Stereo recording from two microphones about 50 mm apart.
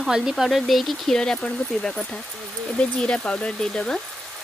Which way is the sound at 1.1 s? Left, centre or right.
Centre.